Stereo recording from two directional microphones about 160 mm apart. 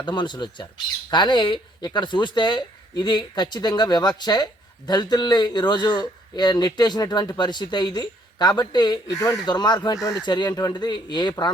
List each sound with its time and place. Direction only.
0.0 s a man's voice: 30° left (ahead or behind)